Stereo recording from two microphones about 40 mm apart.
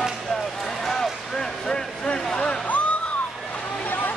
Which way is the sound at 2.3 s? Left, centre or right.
Left.